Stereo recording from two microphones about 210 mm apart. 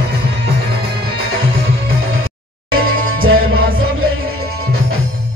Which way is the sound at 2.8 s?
75° right (ahead or behind).